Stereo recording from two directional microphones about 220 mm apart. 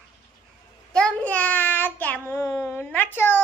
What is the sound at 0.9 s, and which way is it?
A child's voice, 5° left (ahead or behind).